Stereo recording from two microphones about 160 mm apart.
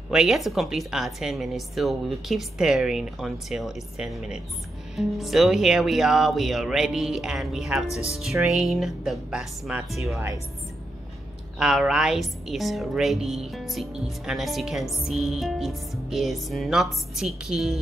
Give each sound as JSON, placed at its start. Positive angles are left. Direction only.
{"t": 0.1, "sound": "a woman's voice", "side_deg": 0}
{"t": 10.1, "sound": "a woman's voice", "side_deg": -20}
{"t": 11.5, "sound": "a woman's voice", "side_deg": -5}